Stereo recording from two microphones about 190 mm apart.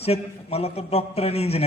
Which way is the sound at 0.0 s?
30° left (ahead or behind).